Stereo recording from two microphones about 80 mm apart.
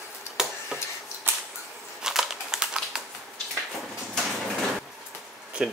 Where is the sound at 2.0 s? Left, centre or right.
Centre.